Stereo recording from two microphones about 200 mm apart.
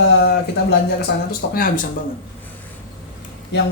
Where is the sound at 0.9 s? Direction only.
45° left (ahead or behind).